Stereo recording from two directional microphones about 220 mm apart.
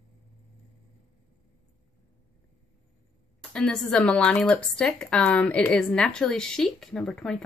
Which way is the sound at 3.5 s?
5° left (ahead or behind).